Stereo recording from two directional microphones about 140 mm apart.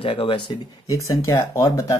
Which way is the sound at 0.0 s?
40° left (ahead or behind).